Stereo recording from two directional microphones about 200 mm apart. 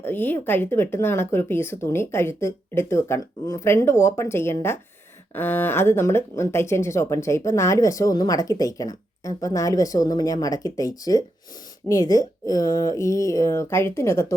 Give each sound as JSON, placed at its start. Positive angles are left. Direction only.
{"t": 0.0, "sound": "speech", "side_deg": 10}